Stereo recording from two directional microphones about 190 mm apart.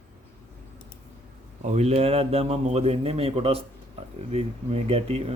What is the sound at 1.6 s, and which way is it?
Speech, 35° right (ahead or behind).